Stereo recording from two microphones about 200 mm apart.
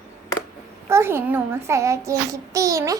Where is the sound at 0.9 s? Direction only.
10° right (ahead or behind).